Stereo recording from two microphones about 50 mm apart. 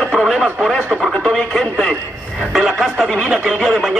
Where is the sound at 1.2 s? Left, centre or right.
Centre.